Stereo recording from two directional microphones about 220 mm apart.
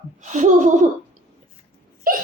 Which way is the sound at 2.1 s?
40° right (ahead or behind).